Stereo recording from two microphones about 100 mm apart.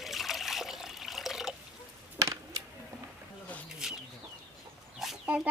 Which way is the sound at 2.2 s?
35° right (ahead or behind).